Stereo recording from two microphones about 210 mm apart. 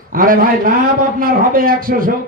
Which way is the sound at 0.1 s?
40° right (ahead or behind).